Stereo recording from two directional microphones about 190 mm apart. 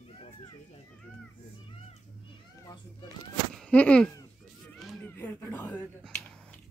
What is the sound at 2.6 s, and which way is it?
Cat, 20° left (ahead or behind).